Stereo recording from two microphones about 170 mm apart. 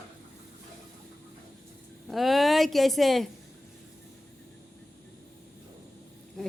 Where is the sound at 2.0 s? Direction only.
Centre (ahead or behind).